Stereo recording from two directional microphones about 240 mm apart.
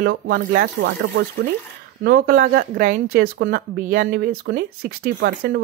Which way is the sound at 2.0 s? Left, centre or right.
Right.